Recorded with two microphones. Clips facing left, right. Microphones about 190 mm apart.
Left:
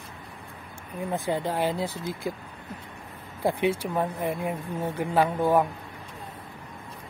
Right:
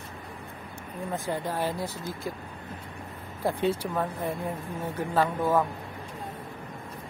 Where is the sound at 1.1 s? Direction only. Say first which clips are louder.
Left 3 dB; 20° left (ahead or behind).